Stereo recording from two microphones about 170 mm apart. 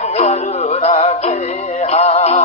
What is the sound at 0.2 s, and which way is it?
Music, 40° left (ahead or behind).